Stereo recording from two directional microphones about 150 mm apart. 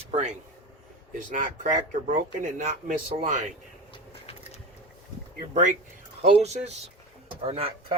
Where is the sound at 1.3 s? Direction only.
65° right (ahead or behind).